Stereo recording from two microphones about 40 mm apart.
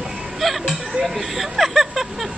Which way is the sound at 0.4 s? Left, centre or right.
Centre.